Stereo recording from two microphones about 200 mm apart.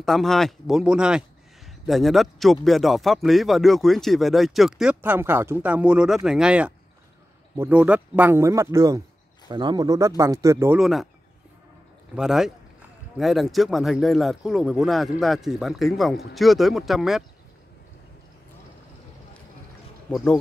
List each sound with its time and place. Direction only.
0.0 s a man's voice: centre (ahead or behind)
10.8 s a man's voice: centre (ahead or behind)
12.2 s a man's voice: centre (ahead or behind)
20.1 s speech: 5° left (ahead or behind)